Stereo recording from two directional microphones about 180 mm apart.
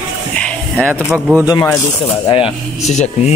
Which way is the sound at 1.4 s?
20° left (ahead or behind).